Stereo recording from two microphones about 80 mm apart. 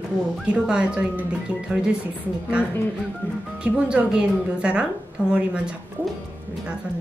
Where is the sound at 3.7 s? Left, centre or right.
Centre.